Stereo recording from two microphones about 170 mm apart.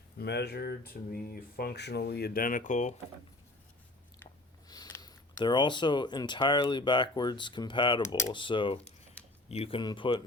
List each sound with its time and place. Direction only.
0.2 s speech: 75° left (ahead or behind); by 2.9 s 45° left (ahead or behind)
4.7 s speech: 20° left (ahead or behind)
8.0 s speech: 15° left (ahead or behind)
8.3 s speech: 30° left (ahead or behind)